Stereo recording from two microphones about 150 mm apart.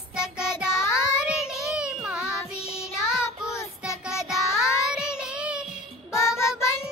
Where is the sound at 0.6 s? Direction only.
5° right (ahead or behind).